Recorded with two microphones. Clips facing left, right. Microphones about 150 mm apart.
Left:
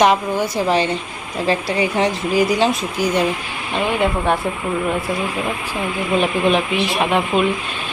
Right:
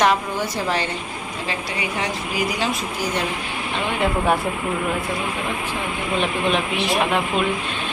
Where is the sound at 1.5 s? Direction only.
30° left (ahead or behind).